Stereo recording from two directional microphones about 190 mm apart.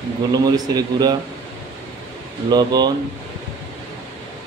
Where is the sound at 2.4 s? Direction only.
20° right (ahead or behind).